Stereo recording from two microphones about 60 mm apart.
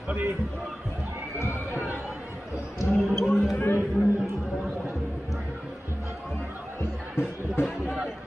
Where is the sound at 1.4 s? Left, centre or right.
Left.